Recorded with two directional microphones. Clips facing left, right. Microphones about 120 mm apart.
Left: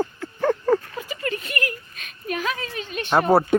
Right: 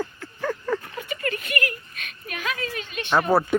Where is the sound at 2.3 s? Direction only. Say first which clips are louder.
Left 3 dB; 35° left (ahead or behind).